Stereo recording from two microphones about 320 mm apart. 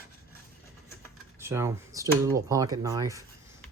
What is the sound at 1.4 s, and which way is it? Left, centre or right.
Speech, centre.